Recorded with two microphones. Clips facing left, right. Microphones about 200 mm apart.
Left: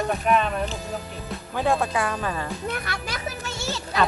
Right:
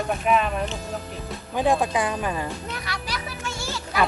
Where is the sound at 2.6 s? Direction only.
55° left (ahead or behind).